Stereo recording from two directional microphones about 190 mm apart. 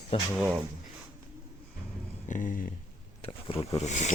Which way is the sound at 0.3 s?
5° right (ahead or behind).